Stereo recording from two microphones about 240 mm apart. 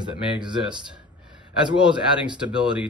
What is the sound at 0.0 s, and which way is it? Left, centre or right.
Speech, centre.